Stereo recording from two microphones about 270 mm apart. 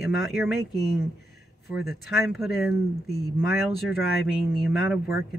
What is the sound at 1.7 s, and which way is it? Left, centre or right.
Speech, left.